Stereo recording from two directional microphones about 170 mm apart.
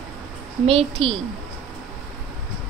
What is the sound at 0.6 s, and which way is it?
Speech, 35° right (ahead or behind).